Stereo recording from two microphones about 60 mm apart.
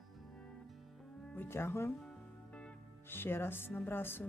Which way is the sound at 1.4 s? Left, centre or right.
Left.